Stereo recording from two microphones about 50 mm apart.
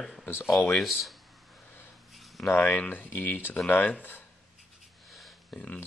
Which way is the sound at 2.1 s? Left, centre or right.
Centre.